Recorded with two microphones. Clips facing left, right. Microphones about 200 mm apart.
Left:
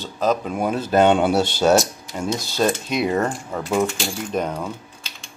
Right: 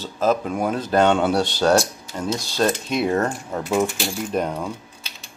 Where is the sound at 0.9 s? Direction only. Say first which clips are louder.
Left 2 dB; 15° left (ahead or behind); by 4.7 s centre (ahead or behind).